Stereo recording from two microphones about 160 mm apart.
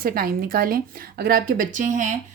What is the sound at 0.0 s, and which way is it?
Speech, 65° right (ahead or behind).